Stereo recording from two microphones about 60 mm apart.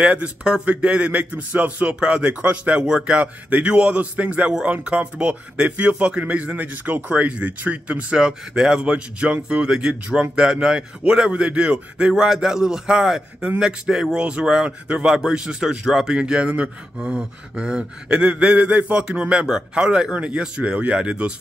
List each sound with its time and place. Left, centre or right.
0.0 s speech: centre
16.2 s speech: centre